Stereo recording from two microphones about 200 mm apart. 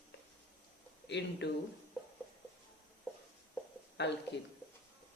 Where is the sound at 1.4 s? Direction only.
60° left (ahead or behind).